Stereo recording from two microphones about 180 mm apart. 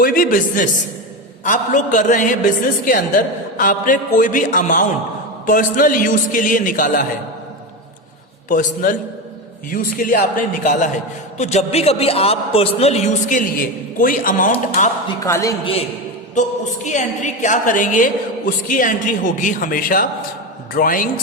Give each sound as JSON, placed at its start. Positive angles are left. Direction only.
{"t": 0.0, "sound": "a woman's voice", "side_deg": 50}
{"t": 8.4, "sound": "a woman's voice", "side_deg": 50}
{"t": 15.0, "sound": "speech", "side_deg": 20}
{"t": 15.6, "sound": "a man's voice", "side_deg": 35}